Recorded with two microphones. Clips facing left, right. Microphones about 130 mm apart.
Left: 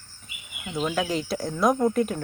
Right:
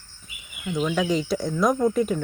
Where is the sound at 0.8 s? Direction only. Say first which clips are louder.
Right 3 dB; 5° left (ahead or behind).